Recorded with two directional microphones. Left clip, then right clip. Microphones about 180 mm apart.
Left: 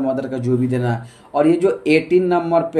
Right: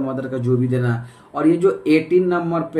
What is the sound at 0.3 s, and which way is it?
Speech, 20° left (ahead or behind).